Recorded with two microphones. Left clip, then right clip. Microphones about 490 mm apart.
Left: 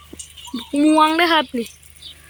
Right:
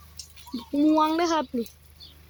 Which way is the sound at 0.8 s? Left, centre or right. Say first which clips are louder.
Left 7 dB; right.